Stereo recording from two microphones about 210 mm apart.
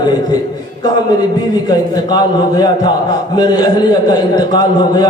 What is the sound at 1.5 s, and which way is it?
A man's voice, 20° left (ahead or behind).